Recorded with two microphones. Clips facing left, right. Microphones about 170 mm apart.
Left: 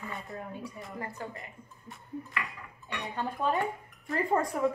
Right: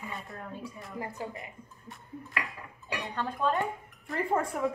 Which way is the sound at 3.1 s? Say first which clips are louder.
Right 1 dB; 15° left (ahead or behind).